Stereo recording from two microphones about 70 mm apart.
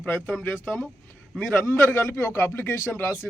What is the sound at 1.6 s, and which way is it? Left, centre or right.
Speech, left.